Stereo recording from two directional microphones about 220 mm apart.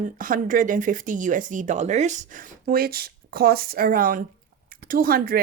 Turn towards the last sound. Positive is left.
turn(degrees=-40)  # may be behind; listen again after turning